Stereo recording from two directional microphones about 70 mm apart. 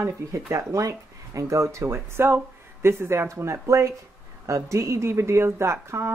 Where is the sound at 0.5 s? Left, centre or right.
Right.